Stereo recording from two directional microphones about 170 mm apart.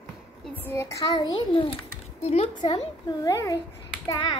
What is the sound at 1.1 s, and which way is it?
A child's voice, 30° left (ahead or behind).